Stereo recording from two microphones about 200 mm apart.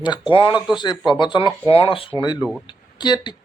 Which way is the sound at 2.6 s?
20° left (ahead or behind).